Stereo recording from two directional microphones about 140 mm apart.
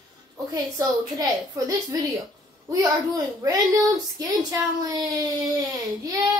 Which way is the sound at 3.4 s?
25° right (ahead or behind).